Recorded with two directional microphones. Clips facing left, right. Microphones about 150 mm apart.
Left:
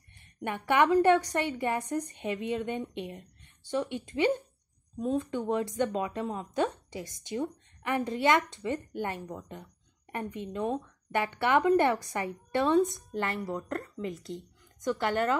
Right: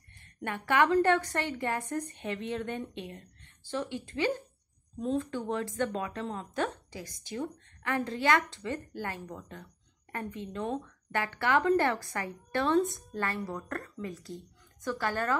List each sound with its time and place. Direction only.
0.4 s a woman's voice: 20° left (ahead or behind)